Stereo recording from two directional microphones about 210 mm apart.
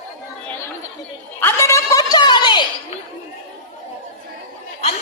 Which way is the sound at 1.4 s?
10° left (ahead or behind).